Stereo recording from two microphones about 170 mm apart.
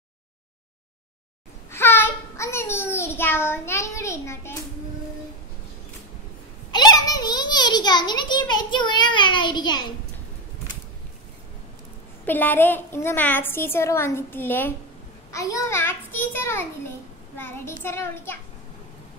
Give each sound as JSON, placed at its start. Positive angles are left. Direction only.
{"t": 1.7, "sound": "child singing", "side_deg": 15}
{"t": 6.7, "sound": "a child's voice", "side_deg": 25}
{"t": 12.3, "sound": "a woman's voice", "side_deg": 10}